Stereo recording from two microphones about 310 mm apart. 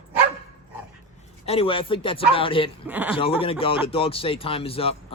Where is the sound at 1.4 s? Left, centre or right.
Centre.